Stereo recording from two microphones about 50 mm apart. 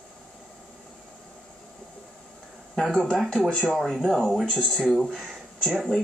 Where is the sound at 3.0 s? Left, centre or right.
Centre.